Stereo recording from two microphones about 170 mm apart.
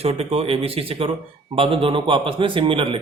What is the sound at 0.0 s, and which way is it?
Speech, 35° right (ahead or behind).